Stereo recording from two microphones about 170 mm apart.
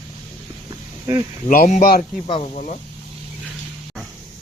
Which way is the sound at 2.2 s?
35° left (ahead or behind).